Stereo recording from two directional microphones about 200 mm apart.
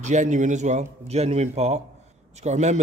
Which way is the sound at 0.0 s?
35° right (ahead or behind).